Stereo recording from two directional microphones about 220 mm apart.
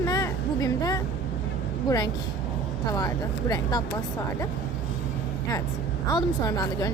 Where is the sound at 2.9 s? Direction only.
15° left (ahead or behind).